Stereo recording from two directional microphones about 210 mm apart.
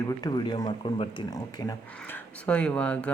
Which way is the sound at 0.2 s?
20° left (ahead or behind).